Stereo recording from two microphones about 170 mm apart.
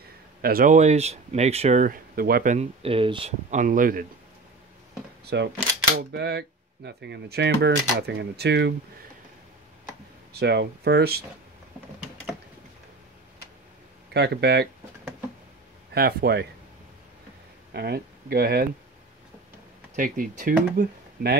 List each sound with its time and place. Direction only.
0.4 s speech: 60° right (ahead or behind)
2.5 s speech: 35° right (ahead or behind); by 4.0 s 55° right (ahead or behind)
5.2 s speech: 80° right
10.3 s speech: 80° right
14.1 s speech: 75° right (ahead or behind)
15.9 s speech: 70° right (ahead or behind)
17.7 s speech: 70° right (ahead or behind)
20.0 s speech: 55° right (ahead or behind)